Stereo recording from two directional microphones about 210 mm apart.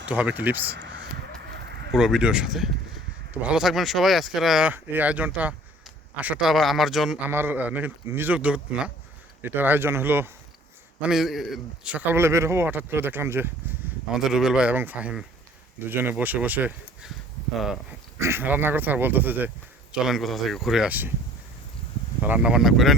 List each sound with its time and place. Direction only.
0.1 s speech: 5° right (ahead or behind)
1.4 s a sound: 50° right (ahead or behind)
1.9 s speech: centre (ahead or behind)
18.2 s speech: 10° right (ahead or behind)
22.2 s speech: 5° right (ahead or behind)